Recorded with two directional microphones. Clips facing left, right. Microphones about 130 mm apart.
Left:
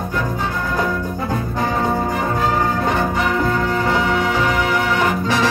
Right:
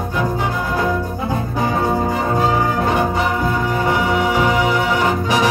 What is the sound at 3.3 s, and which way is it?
Music, 15° right (ahead or behind).